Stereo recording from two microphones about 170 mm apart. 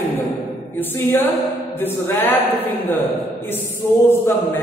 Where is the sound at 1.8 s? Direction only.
10° left (ahead or behind).